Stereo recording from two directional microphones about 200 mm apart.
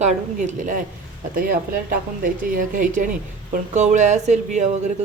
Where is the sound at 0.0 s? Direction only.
35° right (ahead or behind).